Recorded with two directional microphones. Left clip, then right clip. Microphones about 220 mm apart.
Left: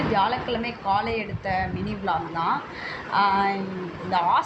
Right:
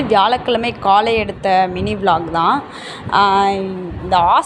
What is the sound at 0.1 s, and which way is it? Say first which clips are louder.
A woman's voice: right 12 dB; 45° right (ahead or behind).